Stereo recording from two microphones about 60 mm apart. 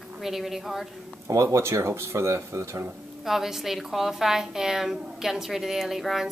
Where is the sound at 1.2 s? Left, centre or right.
Right.